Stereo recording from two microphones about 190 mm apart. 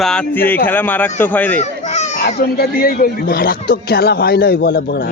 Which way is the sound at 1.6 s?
35° left (ahead or behind).